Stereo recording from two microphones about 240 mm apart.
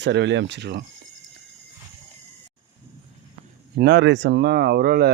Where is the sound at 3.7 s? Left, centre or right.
Right.